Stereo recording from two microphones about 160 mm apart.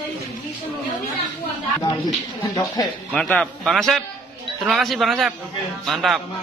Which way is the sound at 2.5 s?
25° left (ahead or behind).